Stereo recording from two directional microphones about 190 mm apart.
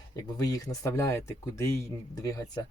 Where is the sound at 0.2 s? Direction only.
20° left (ahead or behind).